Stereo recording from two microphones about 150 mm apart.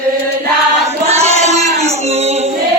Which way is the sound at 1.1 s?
45° right (ahead or behind).